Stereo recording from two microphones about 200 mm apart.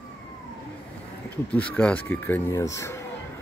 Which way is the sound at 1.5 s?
5° left (ahead or behind).